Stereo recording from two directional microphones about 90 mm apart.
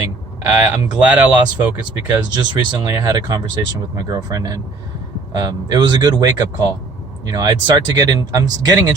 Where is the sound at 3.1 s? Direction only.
45° right (ahead or behind).